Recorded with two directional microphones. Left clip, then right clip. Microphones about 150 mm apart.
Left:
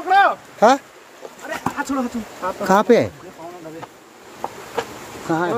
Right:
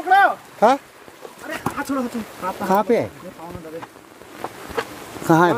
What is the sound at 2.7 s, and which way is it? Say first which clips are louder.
Speech: left 4 dB; 25° left (ahead or behind).